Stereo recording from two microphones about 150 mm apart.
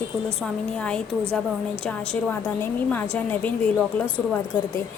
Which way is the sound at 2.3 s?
10° left (ahead or behind).